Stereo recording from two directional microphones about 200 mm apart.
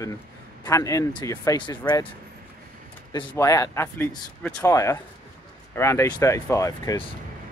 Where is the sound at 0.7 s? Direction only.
15° left (ahead or behind).